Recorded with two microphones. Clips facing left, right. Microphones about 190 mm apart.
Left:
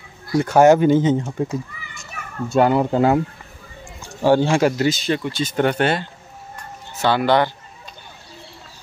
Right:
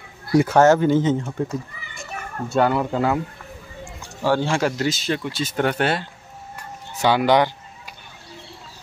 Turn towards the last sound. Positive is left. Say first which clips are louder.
# even
turn(degrees=-15)  # may be behind; listen again after turning